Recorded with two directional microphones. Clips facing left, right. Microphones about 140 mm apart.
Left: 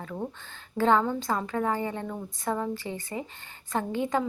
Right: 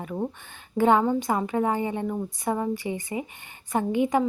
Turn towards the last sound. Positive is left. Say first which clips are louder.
# right 5 dB
turn(degrees=-15)  # may be behind; listen again after turning